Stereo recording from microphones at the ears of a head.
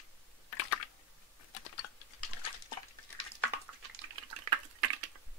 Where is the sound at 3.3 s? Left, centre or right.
Right.